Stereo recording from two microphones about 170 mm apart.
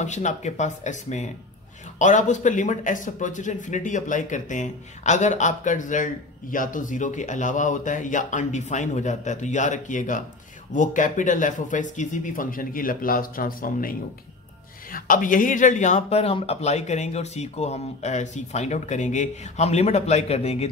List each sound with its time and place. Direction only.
0.0 s speech: 45° left (ahead or behind)